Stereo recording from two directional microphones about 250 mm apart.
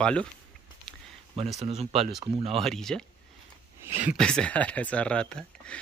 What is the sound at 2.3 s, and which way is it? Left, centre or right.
Speech, right.